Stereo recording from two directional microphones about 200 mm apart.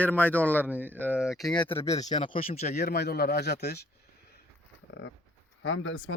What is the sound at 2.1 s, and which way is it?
Speech, 30° left (ahead or behind).